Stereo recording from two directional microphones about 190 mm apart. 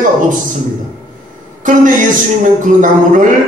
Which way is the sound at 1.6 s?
45° right (ahead or behind).